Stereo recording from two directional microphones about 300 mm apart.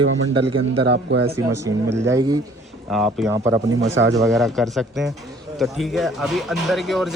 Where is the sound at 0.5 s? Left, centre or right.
Centre.